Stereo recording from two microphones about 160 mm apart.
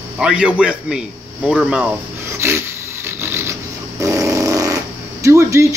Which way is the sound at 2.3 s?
15° right (ahead or behind).